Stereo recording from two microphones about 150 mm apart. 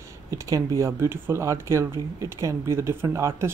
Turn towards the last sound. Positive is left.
turn(degrees=-20)  # may be behind; listen again after turning